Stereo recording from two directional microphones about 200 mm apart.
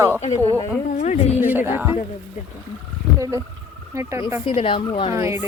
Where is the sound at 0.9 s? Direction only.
35° left (ahead or behind).